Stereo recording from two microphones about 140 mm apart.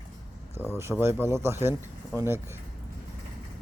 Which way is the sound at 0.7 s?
20° right (ahead or behind).